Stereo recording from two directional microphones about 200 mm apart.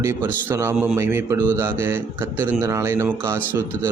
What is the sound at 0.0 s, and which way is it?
A man's voice, 15° right (ahead or behind).